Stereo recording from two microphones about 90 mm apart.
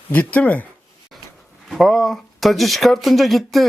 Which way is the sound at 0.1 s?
15° left (ahead or behind).